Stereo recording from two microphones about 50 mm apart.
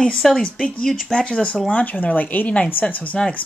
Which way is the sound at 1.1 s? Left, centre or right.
Centre.